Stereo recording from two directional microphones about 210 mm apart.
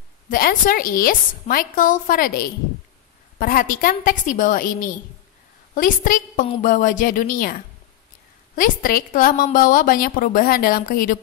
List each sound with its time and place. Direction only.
0.3 s a woman's voice: 40° left (ahead or behind)